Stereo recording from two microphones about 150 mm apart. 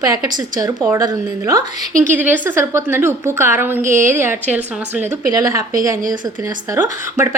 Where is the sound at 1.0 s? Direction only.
25° right (ahead or behind).